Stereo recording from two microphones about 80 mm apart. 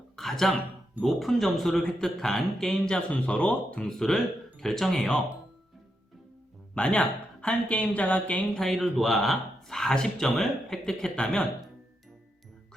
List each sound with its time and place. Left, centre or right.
0.2 s a sound: centre
1.0 s speech: centre
3.8 s speech: centre
6.7 s speech: centre
8.6 s speech: centre